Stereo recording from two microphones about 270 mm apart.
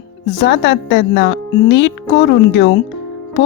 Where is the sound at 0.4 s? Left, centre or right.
Left.